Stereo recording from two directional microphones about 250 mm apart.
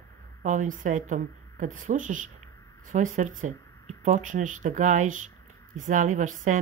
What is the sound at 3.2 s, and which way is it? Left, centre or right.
A woman's voice, right.